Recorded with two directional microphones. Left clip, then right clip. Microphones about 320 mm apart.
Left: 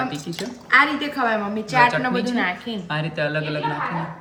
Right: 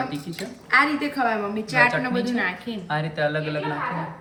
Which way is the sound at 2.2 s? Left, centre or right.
Left.